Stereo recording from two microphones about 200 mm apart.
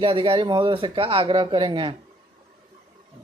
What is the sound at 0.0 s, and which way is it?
Speech, 25° right (ahead or behind).